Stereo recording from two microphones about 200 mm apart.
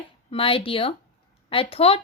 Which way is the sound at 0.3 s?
25° left (ahead or behind).